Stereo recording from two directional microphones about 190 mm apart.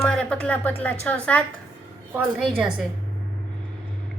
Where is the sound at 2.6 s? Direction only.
5° right (ahead or behind).